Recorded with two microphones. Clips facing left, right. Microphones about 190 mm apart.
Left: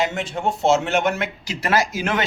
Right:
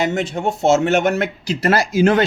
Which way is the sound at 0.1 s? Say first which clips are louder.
Right 4 dB; 45° right (ahead or behind).